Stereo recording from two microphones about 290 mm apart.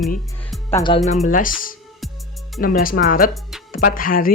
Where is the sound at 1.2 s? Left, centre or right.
Left.